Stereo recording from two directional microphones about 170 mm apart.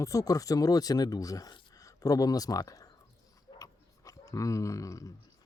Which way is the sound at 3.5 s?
20° left (ahead or behind).